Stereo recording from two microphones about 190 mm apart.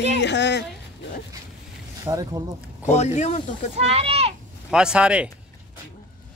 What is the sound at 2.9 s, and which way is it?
Speech, 35° left (ahead or behind).